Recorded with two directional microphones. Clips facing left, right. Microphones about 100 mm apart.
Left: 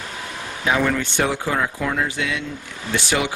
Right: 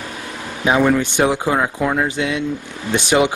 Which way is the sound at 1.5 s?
30° right (ahead or behind).